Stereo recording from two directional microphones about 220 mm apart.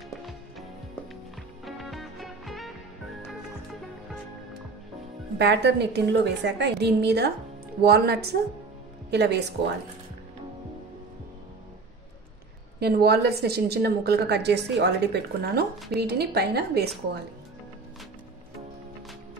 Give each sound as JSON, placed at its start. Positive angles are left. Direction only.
{"t": 1.6, "sound": "music", "side_deg": 0}
{"t": 5.4, "sound": "a woman's voice", "side_deg": -50}
{"t": 12.8, "sound": "a woman's voice", "side_deg": -45}